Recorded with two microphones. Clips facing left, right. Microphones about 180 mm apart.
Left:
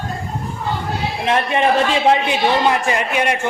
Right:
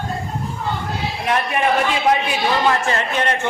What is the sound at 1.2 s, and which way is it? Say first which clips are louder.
A man's voice: left 3 dB; 25° left (ahead or behind).